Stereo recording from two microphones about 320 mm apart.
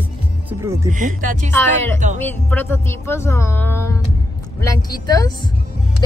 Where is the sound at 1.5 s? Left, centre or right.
Centre.